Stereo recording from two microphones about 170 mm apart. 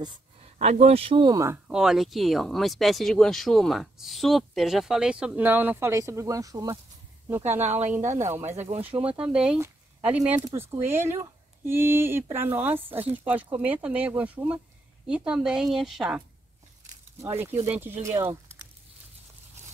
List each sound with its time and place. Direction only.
0.4 s speech: 40° right (ahead or behind)
1.7 s speech: 5° right (ahead or behind)
8.0 s speech: 45° right (ahead or behind)
8.8 s speech: 10° right (ahead or behind)
17.2 s speech: 15° right (ahead or behind)